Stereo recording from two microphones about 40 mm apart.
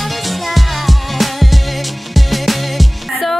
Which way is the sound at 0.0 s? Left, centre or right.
Centre.